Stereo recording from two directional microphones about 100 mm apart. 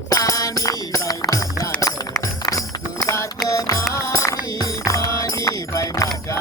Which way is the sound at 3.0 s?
30° left (ahead or behind).